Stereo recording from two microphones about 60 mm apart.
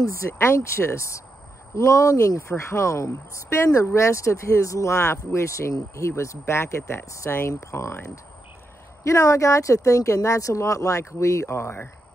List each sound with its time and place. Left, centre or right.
0.0 s speech: left
9.0 s speech: left